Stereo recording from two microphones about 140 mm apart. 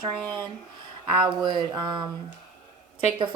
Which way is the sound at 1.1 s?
35° right (ahead or behind).